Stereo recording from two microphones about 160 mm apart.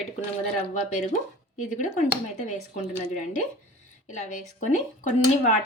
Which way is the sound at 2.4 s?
50° left (ahead or behind).